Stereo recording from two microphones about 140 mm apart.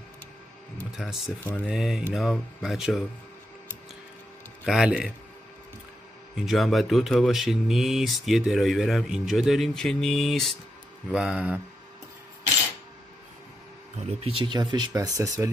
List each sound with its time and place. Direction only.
0.9 s speech: centre (ahead or behind)
1.4 s speech: 10° left (ahead or behind)
1.7 s speech: 5° right (ahead or behind)
4.6 s speech: 5° right (ahead or behind)
6.3 s speech: centre (ahead or behind)
14.2 s speech: 35° right (ahead or behind)